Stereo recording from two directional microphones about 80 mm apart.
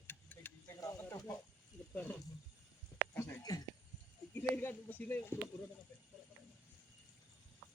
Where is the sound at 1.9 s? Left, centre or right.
Left.